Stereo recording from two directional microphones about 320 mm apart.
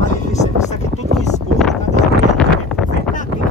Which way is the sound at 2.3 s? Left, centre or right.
Centre.